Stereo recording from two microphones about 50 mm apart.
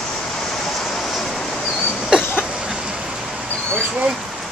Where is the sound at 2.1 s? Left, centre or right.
Centre.